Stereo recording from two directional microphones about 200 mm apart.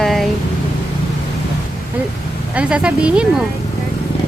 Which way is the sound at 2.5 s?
5° right (ahead or behind).